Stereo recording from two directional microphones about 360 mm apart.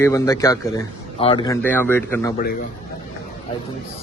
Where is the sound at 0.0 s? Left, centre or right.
Centre.